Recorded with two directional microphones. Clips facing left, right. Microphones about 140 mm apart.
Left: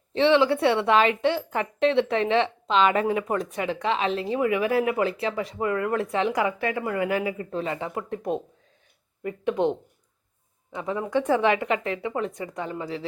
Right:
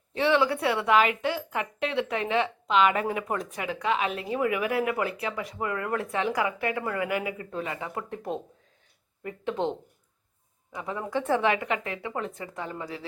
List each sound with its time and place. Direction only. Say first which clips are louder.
0.1 s a woman's voice: left 4 dB; 25° left (ahead or behind)
7.9 s a woman's voice: left 4 dB; 20° left (ahead or behind)